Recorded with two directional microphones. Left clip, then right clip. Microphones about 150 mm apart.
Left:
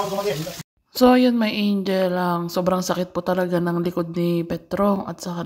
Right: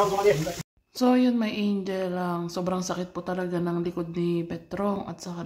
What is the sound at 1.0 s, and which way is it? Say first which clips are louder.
Speech: left 7 dB; 40° left (ahead or behind).